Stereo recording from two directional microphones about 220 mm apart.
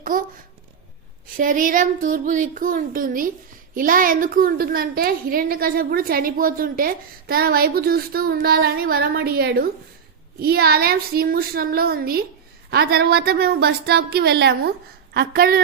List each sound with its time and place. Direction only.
0.0 s a child's voice: 40° right (ahead or behind)
1.4 s a woman's voice: 35° right (ahead or behind)